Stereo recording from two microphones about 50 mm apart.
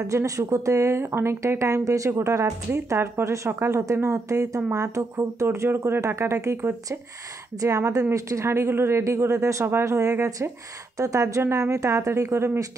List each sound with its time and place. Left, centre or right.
0.0 s speech: right
2.0 s speech: right
5.9 s speech: right
7.6 s a woman's voice: right
10.1 s speech: right
11.0 s a woman's voice: right